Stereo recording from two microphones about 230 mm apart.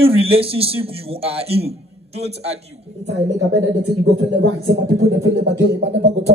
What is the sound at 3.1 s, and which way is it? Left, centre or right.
Speech, right.